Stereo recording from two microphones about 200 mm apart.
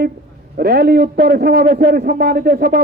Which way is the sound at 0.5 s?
50° right (ahead or behind).